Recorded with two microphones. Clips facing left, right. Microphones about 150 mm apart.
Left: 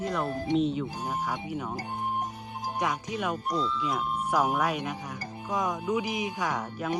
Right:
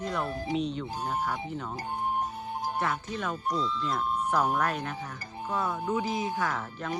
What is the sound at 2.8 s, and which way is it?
Speech, 15° left (ahead or behind).